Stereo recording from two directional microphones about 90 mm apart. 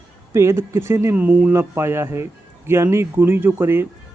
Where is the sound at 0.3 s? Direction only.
30° right (ahead or behind).